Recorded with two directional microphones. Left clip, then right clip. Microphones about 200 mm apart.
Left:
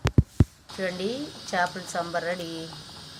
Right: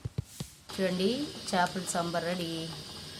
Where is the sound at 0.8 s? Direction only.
25° right (ahead or behind).